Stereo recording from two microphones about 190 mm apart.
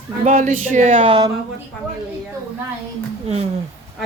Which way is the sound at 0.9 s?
30° right (ahead or behind).